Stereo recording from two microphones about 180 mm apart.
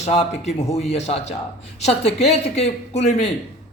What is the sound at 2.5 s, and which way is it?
Speech, 35° left (ahead or behind).